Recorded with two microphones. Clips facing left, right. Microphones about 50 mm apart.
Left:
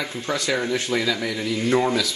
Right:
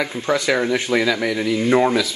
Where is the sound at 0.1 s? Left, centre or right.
Right.